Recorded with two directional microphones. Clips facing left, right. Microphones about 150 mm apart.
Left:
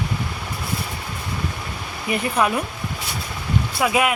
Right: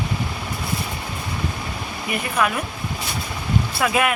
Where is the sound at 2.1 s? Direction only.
30° left (ahead or behind).